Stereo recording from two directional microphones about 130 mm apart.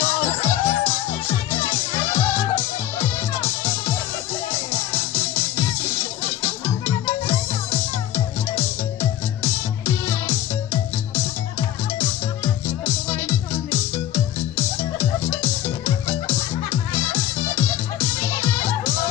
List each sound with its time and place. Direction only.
0.0 s music: 15° left (ahead or behind)
2.1 s music: 15° left (ahead or behind)
4.9 s music: 15° left (ahead or behind)
6.4 s music: 15° left (ahead or behind)
9.4 s music: 15° left (ahead or behind)
12.6 s music: 20° left (ahead or behind)
17.1 s music: 20° left (ahead or behind)